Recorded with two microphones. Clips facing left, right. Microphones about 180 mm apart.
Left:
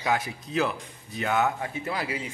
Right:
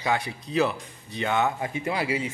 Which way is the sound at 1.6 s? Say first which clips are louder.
Right 3 dB; 10° right (ahead or behind).